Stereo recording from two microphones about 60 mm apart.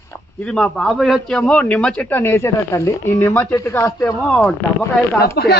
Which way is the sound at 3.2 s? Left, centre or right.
Left.